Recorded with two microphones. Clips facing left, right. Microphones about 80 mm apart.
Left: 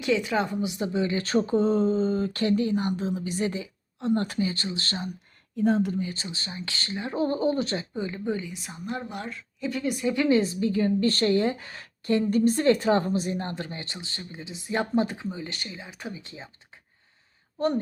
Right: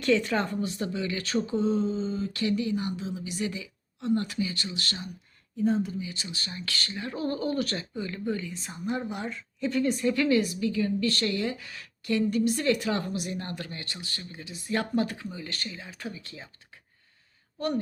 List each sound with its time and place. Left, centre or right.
0.0 s speech: centre
0.9 s speech: left
5.5 s speech: left
6.1 s a woman's voice: left
8.5 s a woman's voice: centre; by 16.8 s left